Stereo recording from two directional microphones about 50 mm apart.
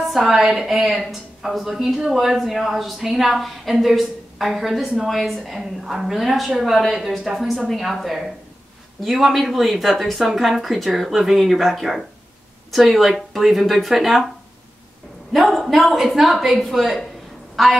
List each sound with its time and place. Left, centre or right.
0.1 s a woman's voice: centre
15.3 s a woman's voice: centre